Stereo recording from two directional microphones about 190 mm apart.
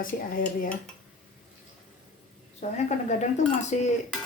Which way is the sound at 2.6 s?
35° left (ahead or behind).